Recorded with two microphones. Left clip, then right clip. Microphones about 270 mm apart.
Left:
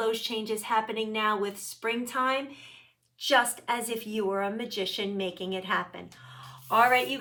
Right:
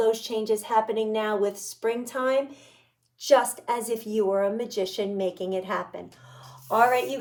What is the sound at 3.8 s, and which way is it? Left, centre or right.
Speech, centre.